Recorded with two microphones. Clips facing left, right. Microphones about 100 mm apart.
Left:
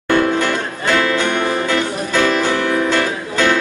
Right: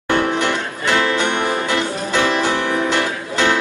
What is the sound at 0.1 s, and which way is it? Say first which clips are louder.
Music: left 2 dB; 20° right (ahead or behind).